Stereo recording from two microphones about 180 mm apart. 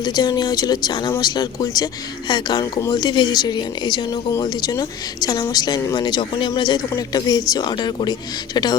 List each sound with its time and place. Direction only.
0.0 s speech: 20° left (ahead or behind)